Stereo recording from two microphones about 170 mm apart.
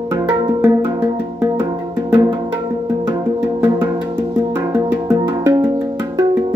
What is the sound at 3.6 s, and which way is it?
Music, 15° right (ahead or behind).